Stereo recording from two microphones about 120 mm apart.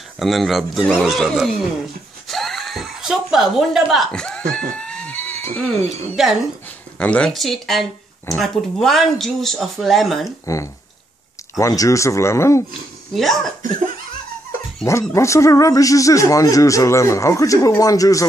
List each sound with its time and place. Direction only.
0.2 s speech: centre (ahead or behind)
2.2 s a sound: centre (ahead or behind)
6.2 s speech: 5° right (ahead or behind)
7.0 s speech: 10° left (ahead or behind)
10.4 s speech: 25° left (ahead or behind)
13.1 s speech: centre (ahead or behind)
14.9 s speech: 25° left (ahead or behind)